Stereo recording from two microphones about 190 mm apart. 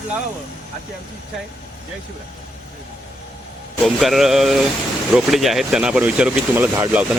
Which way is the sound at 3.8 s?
Centre (ahead or behind).